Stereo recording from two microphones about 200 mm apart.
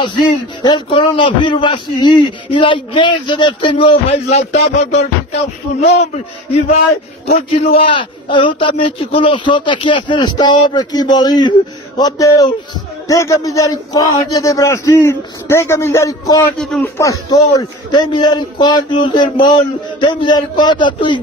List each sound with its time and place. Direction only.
0.0 s a man's voice: 20° left (ahead or behind)
16.5 s speech: centre (ahead or behind)
16.8 s a man's voice: 15° left (ahead or behind)